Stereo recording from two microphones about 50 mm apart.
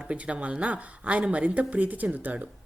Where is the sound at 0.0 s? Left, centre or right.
Right.